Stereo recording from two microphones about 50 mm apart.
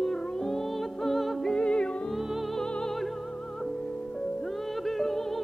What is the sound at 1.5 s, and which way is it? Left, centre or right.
Music, centre.